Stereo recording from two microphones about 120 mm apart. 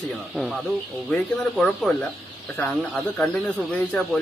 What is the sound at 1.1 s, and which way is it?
Speech, 5° left (ahead or behind).